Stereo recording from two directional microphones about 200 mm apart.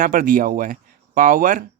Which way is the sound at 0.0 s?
45° right (ahead or behind).